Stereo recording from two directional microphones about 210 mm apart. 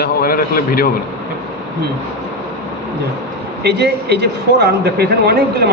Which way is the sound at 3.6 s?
50° right (ahead or behind).